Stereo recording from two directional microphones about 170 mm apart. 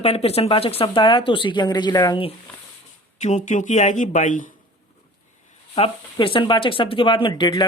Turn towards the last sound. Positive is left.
turn(degrees=25)  # may be behind; listen again after turning